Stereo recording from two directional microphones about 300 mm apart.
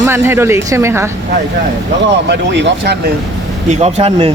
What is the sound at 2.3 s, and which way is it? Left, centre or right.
Speech, right.